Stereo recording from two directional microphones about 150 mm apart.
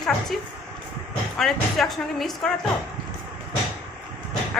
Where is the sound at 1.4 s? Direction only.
Centre (ahead or behind).